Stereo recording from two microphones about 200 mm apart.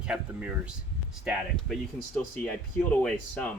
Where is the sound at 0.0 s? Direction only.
5° right (ahead or behind).